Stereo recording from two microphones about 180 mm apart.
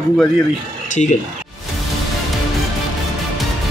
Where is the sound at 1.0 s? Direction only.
35° left (ahead or behind).